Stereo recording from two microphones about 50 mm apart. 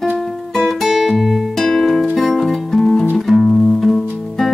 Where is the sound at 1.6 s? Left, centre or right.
Centre.